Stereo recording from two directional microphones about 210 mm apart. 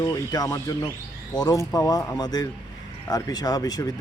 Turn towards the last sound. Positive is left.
turn(degrees=20)  # may be behind; listen again after turning